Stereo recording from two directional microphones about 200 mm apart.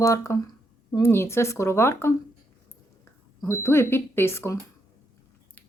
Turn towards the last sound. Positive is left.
turn(degrees=10)  # may be behind; listen again after turning